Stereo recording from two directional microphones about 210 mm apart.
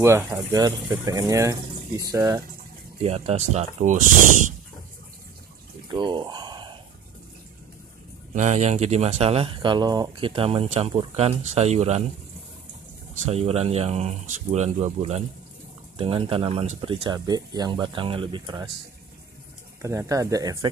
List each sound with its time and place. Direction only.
0.0 s speech: 15° right (ahead or behind)
3.0 s speech: 30° right (ahead or behind)
5.9 s a sound: 20° right (ahead or behind)
8.4 s speech: 35° right (ahead or behind)
13.1 s speech: 30° right (ahead or behind)
19.8 s speech: 15° right (ahead or behind)